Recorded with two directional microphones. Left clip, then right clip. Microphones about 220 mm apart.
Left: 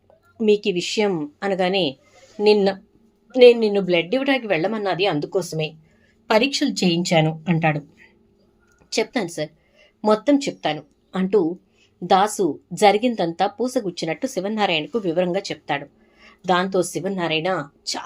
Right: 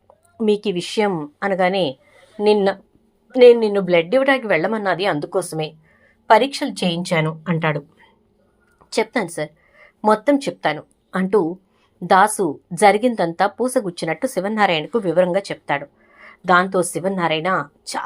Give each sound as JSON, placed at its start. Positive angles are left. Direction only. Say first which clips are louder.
{"t": 0.3, "sound": "a woman's voice", "louder": "left 1 dB", "side_deg": -5}
{"t": 7.0, "sound": "a woman's voice", "louder": "left 1 dB", "side_deg": -45}
{"t": 8.9, "sound": "a woman's voice", "louder": "right 2 dB", "side_deg": -5}